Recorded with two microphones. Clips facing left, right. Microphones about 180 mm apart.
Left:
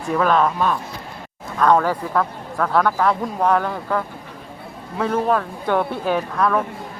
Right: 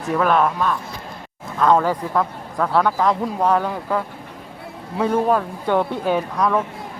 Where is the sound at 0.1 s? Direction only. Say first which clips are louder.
Even; 5° right (ahead or behind).